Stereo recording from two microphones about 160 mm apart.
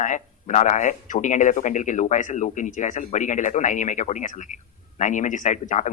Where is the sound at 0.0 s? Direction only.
50° left (ahead or behind).